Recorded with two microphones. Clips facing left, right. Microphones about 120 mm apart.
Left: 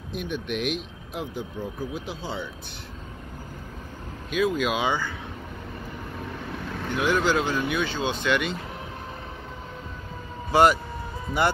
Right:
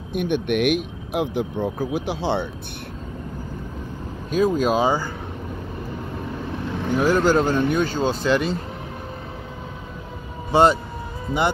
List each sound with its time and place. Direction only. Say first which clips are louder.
0.1 s speech: right 8 dB; 60° right (ahead or behind)
4.3 s speech: right 5 dB; 40° right (ahead or behind)
7.0 s speech: right 5 dB; 40° right (ahead or behind)
10.5 s speech: right 2 dB; 25° right (ahead or behind)